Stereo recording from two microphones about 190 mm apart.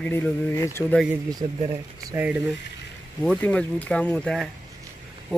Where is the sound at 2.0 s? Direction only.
10° right (ahead or behind).